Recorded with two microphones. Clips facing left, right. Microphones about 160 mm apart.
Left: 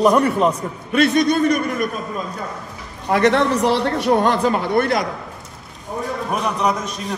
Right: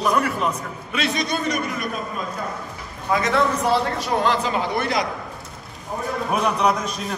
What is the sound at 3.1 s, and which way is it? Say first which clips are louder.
A man's voice: left 5 dB; 70° left (ahead or behind).